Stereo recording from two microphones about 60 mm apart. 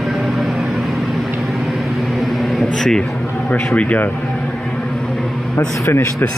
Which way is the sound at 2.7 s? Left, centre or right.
Centre.